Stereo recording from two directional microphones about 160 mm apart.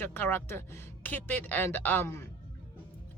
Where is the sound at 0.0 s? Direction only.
15° left (ahead or behind).